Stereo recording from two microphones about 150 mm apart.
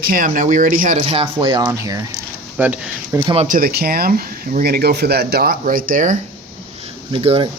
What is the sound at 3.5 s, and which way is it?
Speech, 80° right.